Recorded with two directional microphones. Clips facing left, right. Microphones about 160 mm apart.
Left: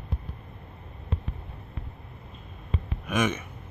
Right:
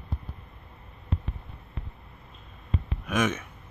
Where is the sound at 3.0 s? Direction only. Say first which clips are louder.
Even; 5° left (ahead or behind).